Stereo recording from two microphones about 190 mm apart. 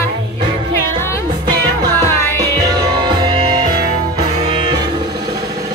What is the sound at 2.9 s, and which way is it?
Music, 25° right (ahead or behind).